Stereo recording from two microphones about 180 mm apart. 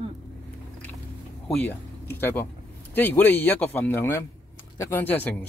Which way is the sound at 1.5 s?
10° left (ahead or behind).